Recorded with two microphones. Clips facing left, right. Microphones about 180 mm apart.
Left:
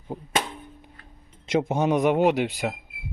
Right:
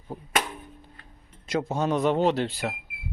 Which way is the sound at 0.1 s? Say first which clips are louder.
Left 1 dB; 15° left (ahead or behind).